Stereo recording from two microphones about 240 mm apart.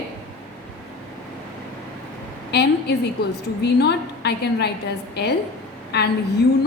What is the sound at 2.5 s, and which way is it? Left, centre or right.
A woman's voice, left.